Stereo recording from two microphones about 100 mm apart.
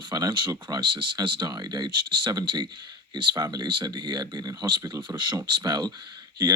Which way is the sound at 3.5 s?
50° right (ahead or behind).